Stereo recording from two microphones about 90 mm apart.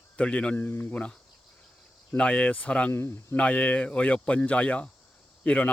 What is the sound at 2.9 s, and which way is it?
Speech, 25° left (ahead or behind).